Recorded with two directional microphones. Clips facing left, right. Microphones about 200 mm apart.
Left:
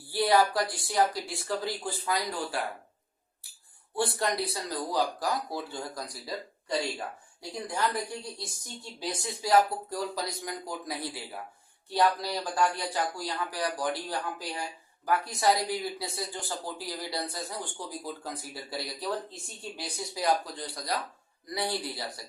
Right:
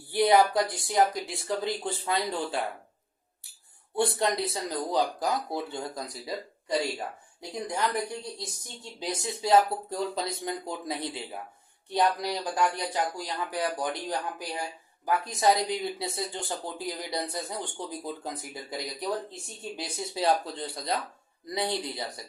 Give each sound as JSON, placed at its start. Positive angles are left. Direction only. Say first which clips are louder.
{"t": 0.1, "sound": "speech", "louder": "right 3 dB", "side_deg": -20}
{"t": 3.9, "sound": "speech", "louder": "right 3 dB", "side_deg": -20}
{"t": 8.4, "sound": "speech", "louder": "right 1 dB", "side_deg": -20}